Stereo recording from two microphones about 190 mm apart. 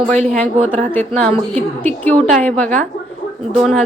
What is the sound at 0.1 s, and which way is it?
Speech, 35° right (ahead or behind).